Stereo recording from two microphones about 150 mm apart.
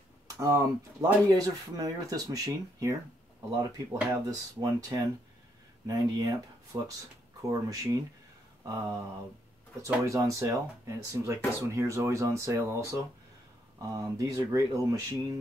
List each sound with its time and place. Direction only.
0.4 s speech: 20° right (ahead or behind)
8.6 s mantra: 20° right (ahead or behind)
9.8 s speech: 20° right (ahead or behind)
13.7 s speech: 25° right (ahead or behind)